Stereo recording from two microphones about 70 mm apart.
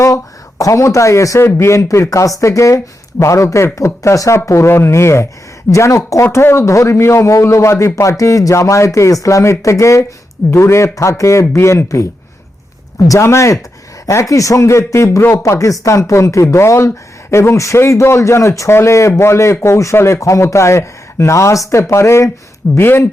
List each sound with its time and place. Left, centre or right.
0.6 s speech: left
13.1 s speech: left